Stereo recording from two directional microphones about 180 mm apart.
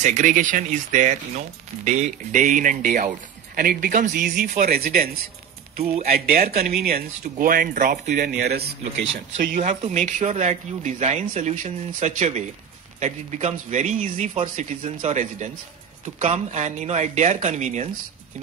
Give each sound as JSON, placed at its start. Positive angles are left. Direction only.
{"t": 0.0, "sound": "speech", "side_deg": -45}
{"t": 6.1, "sound": "speech", "side_deg": -55}
{"t": 8.5, "sound": "speech", "side_deg": -75}
{"t": 9.4, "sound": "speech", "side_deg": -45}